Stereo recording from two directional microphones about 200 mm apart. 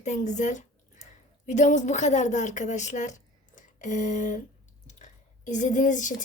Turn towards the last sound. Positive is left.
turn(degrees=40)  # may be behind; listen again after turning